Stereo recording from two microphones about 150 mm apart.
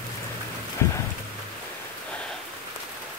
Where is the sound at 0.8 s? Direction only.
20° left (ahead or behind).